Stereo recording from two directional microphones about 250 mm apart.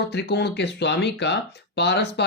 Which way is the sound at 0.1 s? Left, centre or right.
Left.